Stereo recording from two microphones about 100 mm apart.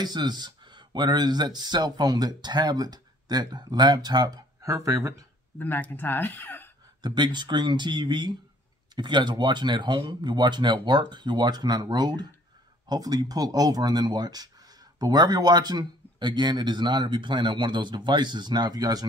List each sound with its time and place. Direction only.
0.0 s speech: 45° right (ahead or behind)
4.6 s speech: 30° right (ahead or behind)
5.6 s speech: 20° left (ahead or behind)
7.0 s speech: 45° right (ahead or behind)